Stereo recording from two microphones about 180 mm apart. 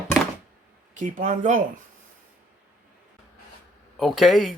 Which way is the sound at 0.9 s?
45° right (ahead or behind).